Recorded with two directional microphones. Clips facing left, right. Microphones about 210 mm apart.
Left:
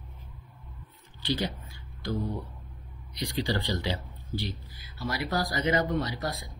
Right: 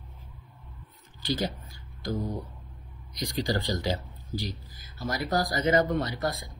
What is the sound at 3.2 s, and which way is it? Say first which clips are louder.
Speech: right 1 dB; 45° right (ahead or behind).